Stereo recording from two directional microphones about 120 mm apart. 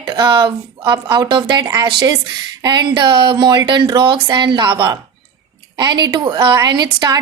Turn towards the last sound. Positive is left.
turn(degrees=-35)  # may be behind; listen again after turning